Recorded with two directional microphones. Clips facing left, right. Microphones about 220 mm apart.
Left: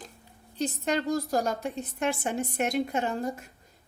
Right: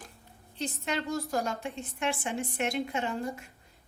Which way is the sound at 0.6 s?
40° left (ahead or behind).